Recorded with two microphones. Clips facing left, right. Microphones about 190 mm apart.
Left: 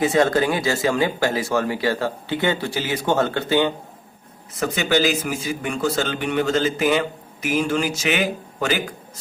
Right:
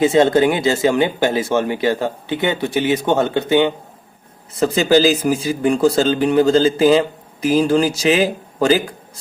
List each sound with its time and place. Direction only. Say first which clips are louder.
0.0 s speech: right 5 dB; 25° right (ahead or behind)
4.6 s speech: right 7 dB; 35° right (ahead or behind)